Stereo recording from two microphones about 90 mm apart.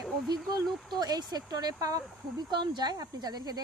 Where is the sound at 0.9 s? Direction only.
45° right (ahead or behind).